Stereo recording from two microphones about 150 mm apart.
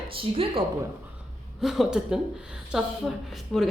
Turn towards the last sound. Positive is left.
turn(degrees=0)  # may be behind; listen again after turning